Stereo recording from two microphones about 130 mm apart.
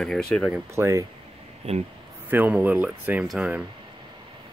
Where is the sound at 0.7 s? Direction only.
20° right (ahead or behind).